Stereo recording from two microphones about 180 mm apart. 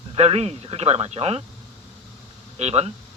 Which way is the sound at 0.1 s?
35° right (ahead or behind).